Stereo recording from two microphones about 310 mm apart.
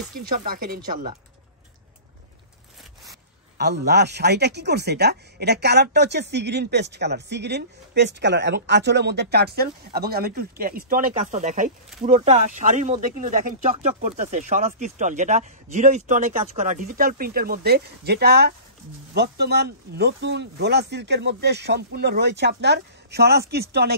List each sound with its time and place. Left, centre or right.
0.1 s speech: right
3.5 s speech: right